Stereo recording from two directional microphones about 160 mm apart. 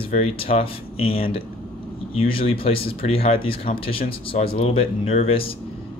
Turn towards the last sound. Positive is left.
turn(degrees=35)  # may be behind; listen again after turning